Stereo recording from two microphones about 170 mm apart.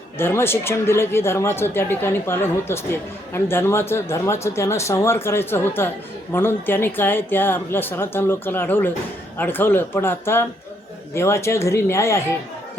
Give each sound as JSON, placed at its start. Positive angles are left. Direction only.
{"t": 0.2, "sound": "speech", "side_deg": 15}